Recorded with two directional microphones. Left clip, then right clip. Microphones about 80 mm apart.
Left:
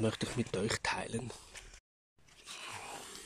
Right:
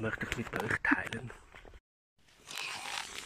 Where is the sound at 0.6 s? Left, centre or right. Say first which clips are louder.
Right 7 dB; left.